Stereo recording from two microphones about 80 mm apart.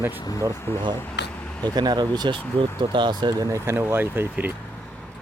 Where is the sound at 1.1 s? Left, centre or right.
Centre.